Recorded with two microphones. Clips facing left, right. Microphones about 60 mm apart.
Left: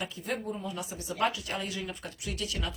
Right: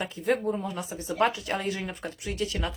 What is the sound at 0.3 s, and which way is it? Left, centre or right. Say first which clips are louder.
Speech: right 6 dB; right.